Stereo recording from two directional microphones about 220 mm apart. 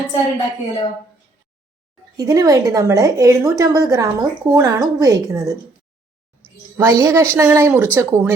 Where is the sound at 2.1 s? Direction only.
15° right (ahead or behind).